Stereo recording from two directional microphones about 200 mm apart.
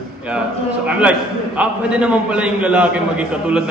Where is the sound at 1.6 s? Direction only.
5° right (ahead or behind).